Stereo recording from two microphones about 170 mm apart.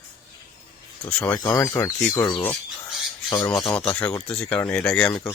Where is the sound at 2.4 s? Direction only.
10° left (ahead or behind).